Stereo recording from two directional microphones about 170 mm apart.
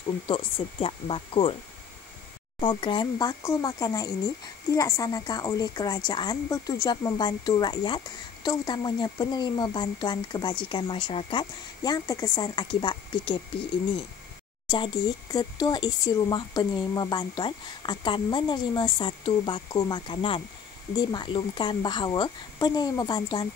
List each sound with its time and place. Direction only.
0.3 s speech: 30° left (ahead or behind)
2.6 s a woman's voice: 25° left (ahead or behind)
14.7 s a woman's voice: 25° left (ahead or behind)